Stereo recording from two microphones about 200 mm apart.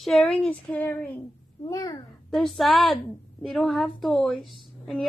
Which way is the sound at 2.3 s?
Centre (ahead or behind).